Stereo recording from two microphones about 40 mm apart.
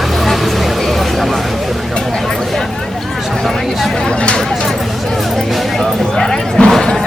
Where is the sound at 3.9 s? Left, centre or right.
Centre.